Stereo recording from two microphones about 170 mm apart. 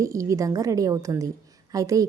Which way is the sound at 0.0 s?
20° right (ahead or behind).